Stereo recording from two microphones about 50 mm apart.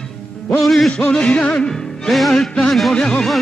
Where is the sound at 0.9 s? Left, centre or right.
Centre.